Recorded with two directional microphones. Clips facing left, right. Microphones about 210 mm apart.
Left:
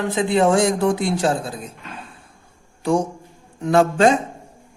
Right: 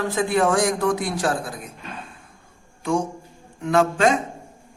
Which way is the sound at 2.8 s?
35° left (ahead or behind).